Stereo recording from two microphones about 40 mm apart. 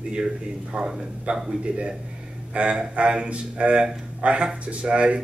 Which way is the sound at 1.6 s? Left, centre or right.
Right.